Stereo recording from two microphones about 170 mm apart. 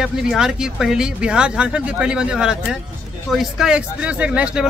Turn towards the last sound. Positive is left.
turn(degrees=-5)  # may be behind; listen again after turning